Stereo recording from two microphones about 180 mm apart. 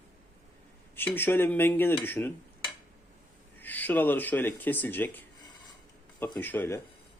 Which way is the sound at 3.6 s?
10° left (ahead or behind).